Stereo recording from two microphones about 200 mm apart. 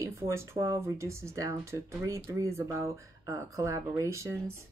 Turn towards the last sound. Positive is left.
turn(degrees=-15)  # may be behind; listen again after turning